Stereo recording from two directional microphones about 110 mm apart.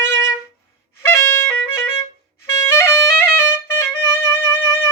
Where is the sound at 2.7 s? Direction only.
25° left (ahead or behind).